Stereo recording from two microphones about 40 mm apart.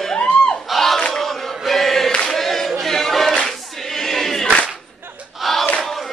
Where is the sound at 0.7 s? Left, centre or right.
Centre.